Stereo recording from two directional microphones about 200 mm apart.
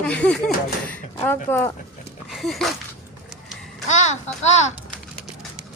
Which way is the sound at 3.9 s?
35° left (ahead or behind).